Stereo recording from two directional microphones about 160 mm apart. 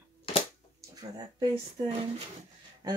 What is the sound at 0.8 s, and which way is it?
Speech, 25° right (ahead or behind).